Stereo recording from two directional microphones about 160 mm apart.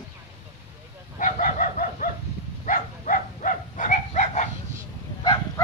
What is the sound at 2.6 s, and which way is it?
Livestock, 55° left (ahead or behind).